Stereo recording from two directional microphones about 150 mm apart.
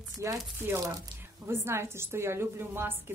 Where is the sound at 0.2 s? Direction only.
15° right (ahead or behind).